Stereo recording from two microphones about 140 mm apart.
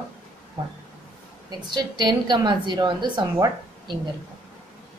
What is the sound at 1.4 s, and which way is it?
A woman's voice, 30° right (ahead or behind).